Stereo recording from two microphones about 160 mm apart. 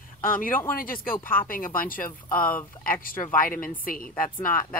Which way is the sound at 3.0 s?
60° left (ahead or behind).